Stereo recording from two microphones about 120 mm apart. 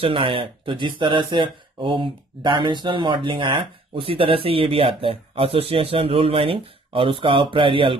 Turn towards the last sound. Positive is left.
turn(degrees=-45)  # may be behind; listen again after turning